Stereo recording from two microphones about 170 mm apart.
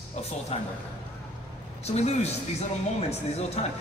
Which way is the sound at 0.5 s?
40° left (ahead or behind).